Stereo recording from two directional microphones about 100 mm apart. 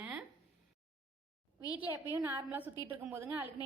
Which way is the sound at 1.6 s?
40° left (ahead or behind).